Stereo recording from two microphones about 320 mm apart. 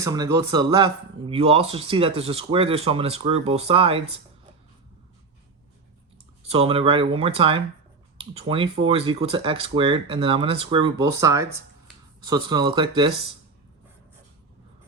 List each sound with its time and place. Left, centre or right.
0.0 s speech: centre
6.5 s speech: centre